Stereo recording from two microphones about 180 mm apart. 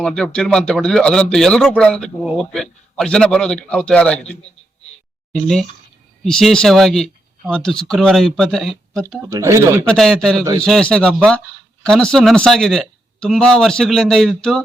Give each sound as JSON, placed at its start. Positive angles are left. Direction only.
{"t": 0.0, "sound": "speech", "side_deg": 5}
{"t": 9.0, "sound": "speech", "side_deg": -15}
{"t": 9.8, "sound": "speech", "side_deg": 5}